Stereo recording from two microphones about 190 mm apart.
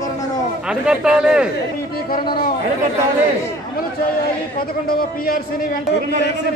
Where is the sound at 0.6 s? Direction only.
5° right (ahead or behind).